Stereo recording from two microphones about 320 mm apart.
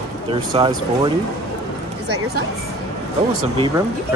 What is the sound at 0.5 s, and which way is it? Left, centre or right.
Speech, centre.